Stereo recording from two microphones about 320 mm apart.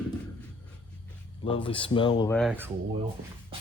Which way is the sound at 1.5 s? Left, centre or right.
Centre.